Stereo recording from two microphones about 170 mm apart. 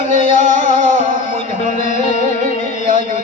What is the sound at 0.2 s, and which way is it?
Music, 45° left (ahead or behind).